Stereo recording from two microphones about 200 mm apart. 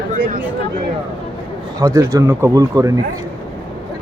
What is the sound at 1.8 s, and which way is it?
A man's voice, 15° right (ahead or behind).